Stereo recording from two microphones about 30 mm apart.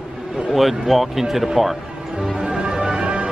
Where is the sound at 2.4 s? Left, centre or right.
Right.